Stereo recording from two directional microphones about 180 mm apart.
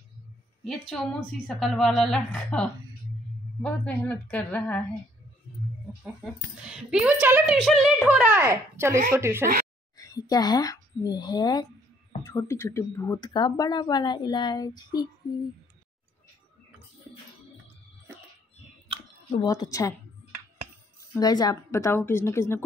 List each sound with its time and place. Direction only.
0.7 s a woman's voice: centre (ahead or behind)
6.6 s a woman's voice: 5° right (ahead or behind)
9.9 s a woman's voice: 20° left (ahead or behind)
19.4 s speech: 20° left (ahead or behind)
21.1 s a woman's voice: 20° left (ahead or behind)